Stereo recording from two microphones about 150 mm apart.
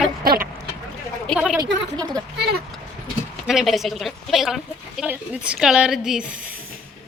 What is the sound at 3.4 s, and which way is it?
A woman's voice, centre (ahead or behind).